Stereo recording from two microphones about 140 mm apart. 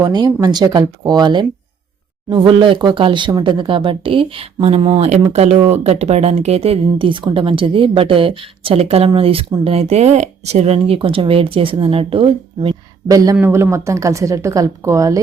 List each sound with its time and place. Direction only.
0.0 s speech: 25° right (ahead or behind)
13.1 s speech: 25° right (ahead or behind)